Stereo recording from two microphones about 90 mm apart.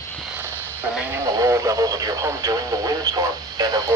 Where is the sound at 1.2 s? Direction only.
35° right (ahead or behind).